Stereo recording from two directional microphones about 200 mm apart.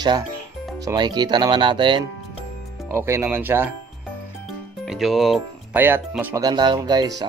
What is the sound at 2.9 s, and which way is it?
Speech, 15° right (ahead or behind).